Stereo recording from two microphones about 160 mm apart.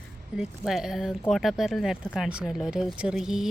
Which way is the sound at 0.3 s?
Centre (ahead or behind).